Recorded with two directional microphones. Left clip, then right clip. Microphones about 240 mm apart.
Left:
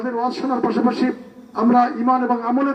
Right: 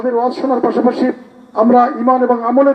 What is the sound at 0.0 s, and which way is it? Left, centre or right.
A man's voice, left.